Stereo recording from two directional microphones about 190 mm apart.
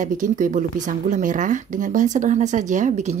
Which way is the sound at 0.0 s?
45° right (ahead or behind).